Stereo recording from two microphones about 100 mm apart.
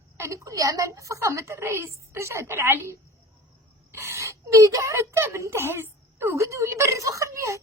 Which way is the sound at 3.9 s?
25° right (ahead or behind).